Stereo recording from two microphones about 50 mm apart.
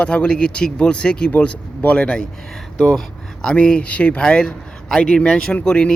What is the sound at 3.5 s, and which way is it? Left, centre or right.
Speech, left.